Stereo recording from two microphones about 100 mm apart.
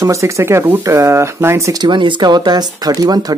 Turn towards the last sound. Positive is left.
turn(degrees=-40)  # may be behind; listen again after turning